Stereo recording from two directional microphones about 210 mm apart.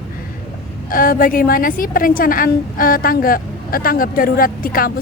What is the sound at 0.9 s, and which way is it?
A woman's voice, 40° left (ahead or behind).